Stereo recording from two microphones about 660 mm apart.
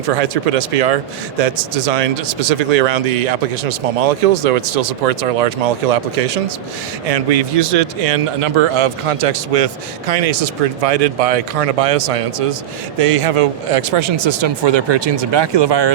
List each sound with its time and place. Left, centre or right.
0.2 s speech: right
7.1 s speech: right